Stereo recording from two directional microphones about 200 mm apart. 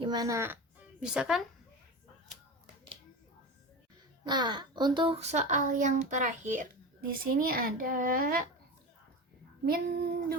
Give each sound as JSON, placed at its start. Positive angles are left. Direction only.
{"t": 0.0, "sound": "speech", "side_deg": -20}
{"t": 4.2, "sound": "speech", "side_deg": -20}
{"t": 7.3, "sound": "a child's voice", "side_deg": -50}
{"t": 9.6, "sound": "a child's voice", "side_deg": -50}